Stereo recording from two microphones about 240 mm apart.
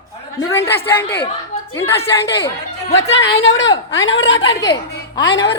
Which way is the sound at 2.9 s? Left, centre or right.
Left.